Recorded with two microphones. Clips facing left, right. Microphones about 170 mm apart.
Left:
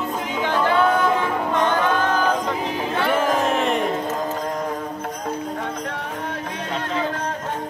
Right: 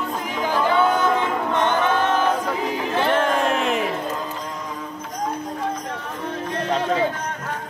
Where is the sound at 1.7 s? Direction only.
20° right (ahead or behind).